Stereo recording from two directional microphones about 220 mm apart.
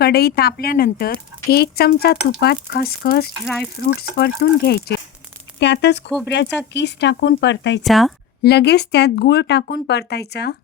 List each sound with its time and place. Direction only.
0.0 s speech: 45° left (ahead or behind)
3.4 s speech: centre (ahead or behind)
3.8 s speech: 45° left (ahead or behind)
7.9 s speech: centre (ahead or behind)
8.4 s speech: 45° left (ahead or behind)